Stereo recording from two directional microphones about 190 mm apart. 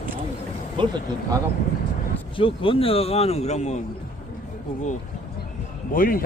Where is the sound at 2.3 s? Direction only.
25° left (ahead or behind).